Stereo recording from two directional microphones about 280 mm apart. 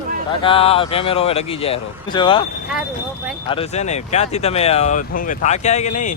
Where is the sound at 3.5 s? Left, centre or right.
Left.